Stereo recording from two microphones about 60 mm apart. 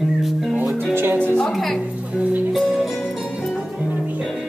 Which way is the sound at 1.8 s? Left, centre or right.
Right.